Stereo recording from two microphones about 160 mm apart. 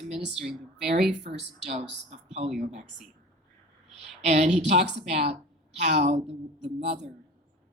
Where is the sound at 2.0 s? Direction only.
45° right (ahead or behind).